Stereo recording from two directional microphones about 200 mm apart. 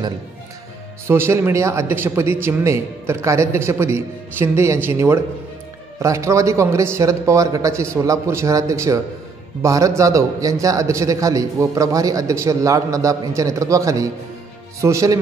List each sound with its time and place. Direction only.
1.0 s speech: 10° right (ahead or behind)